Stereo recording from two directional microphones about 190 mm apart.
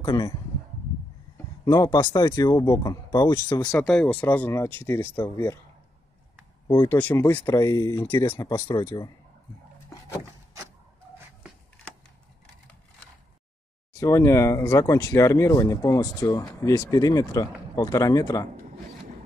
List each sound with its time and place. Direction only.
0.0 s speech: 25° left (ahead or behind)
1.6 s speech: 20° left (ahead or behind)
3.8 s speech: 5° left (ahead or behind)
6.7 s speech: 15° left (ahead or behind)
9.8 s vehicle: 15° left (ahead or behind)
13.9 s speech: 15° left (ahead or behind)